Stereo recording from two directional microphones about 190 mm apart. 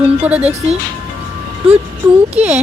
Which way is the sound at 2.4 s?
5° right (ahead or behind).